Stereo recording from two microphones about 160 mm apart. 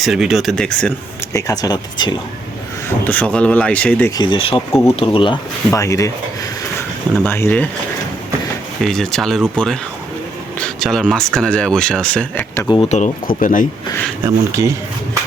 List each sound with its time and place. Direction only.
0.0 s speech: centre (ahead or behind)
1.3 s speech: 20° left (ahead or behind)
3.0 s speech: 10° left (ahead or behind)
4.2 s speech: 30° left (ahead or behind)
4.7 s speech: 15° left (ahead or behind)
4.9 s speech: 35° left (ahead or behind)
5.7 s speech: 20° left (ahead or behind)
8.8 s speech: 5° left (ahead or behind)
10.6 s speech: centre (ahead or behind)
12.5 s speech: 25° left (ahead or behind)
12.9 s speech: 50° left (ahead or behind)
14.3 s speech: 20° right (ahead or behind)